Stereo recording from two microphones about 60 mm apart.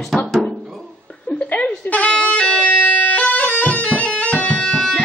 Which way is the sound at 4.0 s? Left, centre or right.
Left.